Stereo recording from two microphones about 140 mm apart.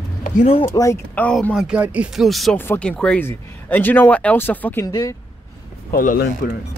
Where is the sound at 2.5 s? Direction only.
15° left (ahead or behind).